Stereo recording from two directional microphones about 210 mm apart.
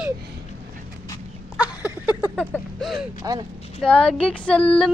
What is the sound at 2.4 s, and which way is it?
Speech, centre (ahead or behind).